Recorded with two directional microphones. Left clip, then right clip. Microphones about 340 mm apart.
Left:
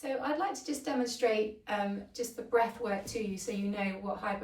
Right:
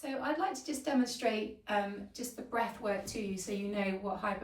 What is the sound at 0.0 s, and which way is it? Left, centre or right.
A woman's voice, centre.